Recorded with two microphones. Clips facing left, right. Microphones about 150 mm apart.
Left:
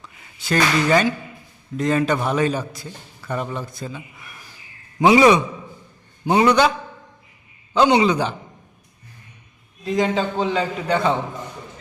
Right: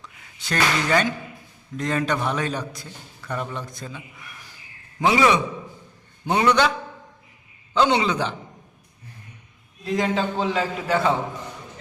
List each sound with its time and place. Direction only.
0.0 s a man's voice: 5° left (ahead or behind)
4.9 s a man's voice: 15° left (ahead or behind)
7.7 s a man's voice: 10° left (ahead or behind)
9.8 s a man's voice: centre (ahead or behind)